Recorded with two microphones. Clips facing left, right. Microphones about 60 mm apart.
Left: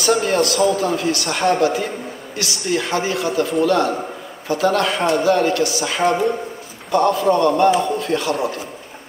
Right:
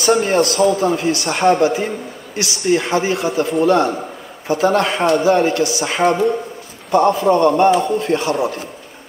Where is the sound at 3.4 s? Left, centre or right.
Right.